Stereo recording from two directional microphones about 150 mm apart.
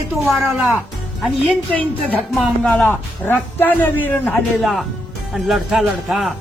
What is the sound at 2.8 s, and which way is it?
A man's voice, 10° left (ahead or behind).